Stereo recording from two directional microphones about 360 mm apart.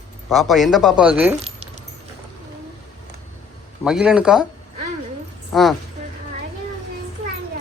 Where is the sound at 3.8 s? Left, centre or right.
Centre.